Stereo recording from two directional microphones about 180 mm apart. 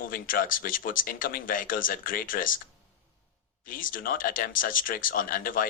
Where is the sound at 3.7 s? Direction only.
50° left (ahead or behind).